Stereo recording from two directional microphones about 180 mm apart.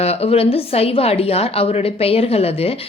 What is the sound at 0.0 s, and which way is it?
A woman's voice, 35° left (ahead or behind).